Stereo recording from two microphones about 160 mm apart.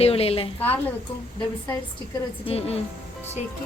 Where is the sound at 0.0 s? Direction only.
40° left (ahead or behind).